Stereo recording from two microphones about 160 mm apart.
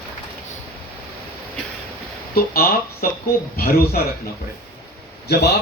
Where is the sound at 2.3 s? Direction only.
70° left (ahead or behind).